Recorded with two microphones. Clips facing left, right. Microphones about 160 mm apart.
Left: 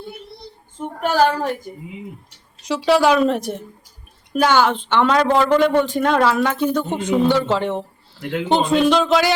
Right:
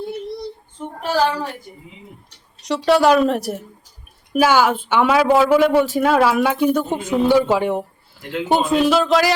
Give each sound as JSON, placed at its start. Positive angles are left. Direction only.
{"t": 0.8, "sound": "a child's voice", "side_deg": 50}
{"t": 2.6, "sound": "a woman's voice", "side_deg": 0}